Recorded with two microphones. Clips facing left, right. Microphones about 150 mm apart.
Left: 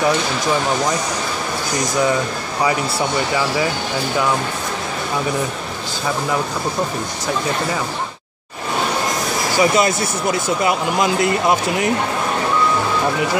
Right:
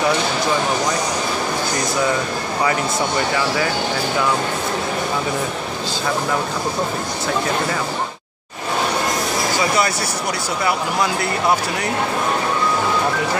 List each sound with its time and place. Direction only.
9.6 s speech: 20° left (ahead or behind)